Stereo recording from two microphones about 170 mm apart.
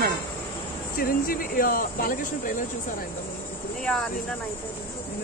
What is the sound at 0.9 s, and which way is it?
Speech, 60° left (ahead or behind).